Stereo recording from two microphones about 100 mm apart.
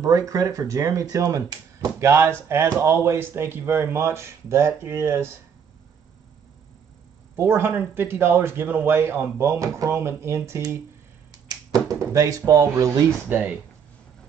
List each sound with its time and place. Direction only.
0.0 s speech: 35° right (ahead or behind)
7.3 s speech: 25° right (ahead or behind)
11.3 s speech: 40° right (ahead or behind)
13.3 s speech: 15° right (ahead or behind)